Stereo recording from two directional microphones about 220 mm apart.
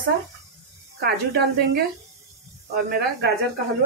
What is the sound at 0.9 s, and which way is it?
A woman's voice, 45° right (ahead or behind).